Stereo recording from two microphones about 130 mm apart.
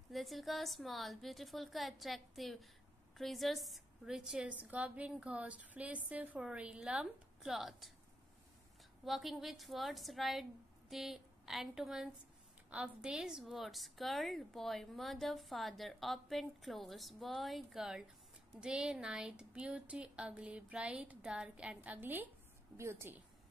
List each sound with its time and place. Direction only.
0.1 s a woman's voice: centre (ahead or behind)
9.0 s a woman's voice: centre (ahead or behind); by 23.2 s 20° right (ahead or behind)